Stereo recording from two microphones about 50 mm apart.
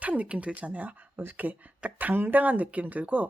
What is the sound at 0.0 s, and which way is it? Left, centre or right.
Speech, right.